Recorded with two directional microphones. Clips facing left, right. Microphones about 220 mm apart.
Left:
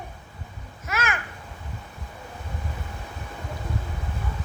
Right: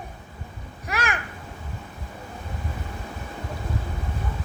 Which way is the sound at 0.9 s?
35° right (ahead or behind).